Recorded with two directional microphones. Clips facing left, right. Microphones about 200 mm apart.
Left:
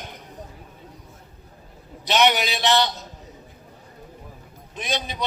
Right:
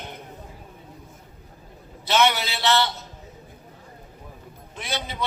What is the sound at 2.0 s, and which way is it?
A man's voice, 15° left (ahead or behind).